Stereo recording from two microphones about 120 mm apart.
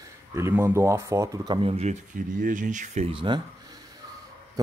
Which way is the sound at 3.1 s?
45° right (ahead or behind).